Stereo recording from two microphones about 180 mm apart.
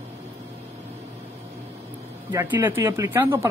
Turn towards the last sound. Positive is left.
turn(degrees=-15)  # may be behind; listen again after turning